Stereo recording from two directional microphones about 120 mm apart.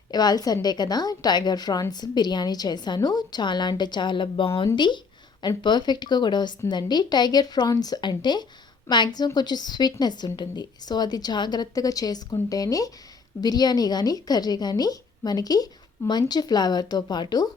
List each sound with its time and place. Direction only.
0.1 s a woman's voice: 35° left (ahead or behind)